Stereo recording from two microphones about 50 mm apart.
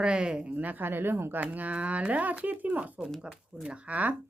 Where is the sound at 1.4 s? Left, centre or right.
Right.